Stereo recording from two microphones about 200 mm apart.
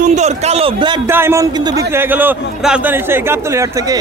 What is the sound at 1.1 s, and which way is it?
A man's voice, 10° right (ahead or behind).